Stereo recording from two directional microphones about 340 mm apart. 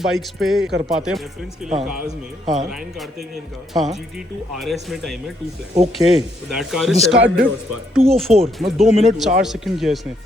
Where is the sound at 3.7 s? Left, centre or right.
Centre.